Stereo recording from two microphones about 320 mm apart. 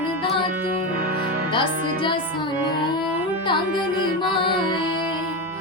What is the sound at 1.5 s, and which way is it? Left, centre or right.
Music, centre.